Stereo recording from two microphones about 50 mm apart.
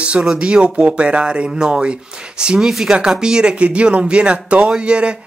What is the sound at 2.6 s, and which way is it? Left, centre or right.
Speech, centre.